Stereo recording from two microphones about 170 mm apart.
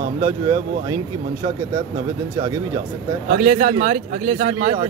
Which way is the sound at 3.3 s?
50° right (ahead or behind).